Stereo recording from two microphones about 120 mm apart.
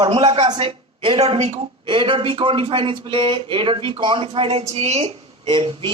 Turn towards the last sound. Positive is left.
turn(degrees=-45)  # may be behind; listen again after turning